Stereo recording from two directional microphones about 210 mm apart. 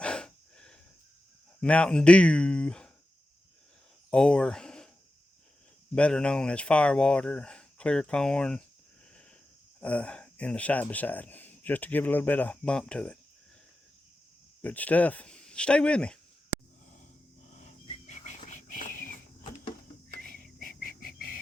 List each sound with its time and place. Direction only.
0.0 s breathing: 5° left (ahead or behind)
1.6 s speech: 5° left (ahead or behind)
4.1 s speech: 5° left (ahead or behind)
5.9 s speech: 5° left (ahead or behind)
9.8 s speech: 5° left (ahead or behind)
14.6 s speech: 5° left (ahead or behind)
17.6 s a sound: 35° left (ahead or behind)
20.2 s whispering: 45° right (ahead or behind)
20.6 s a sound: 40° left (ahead or behind)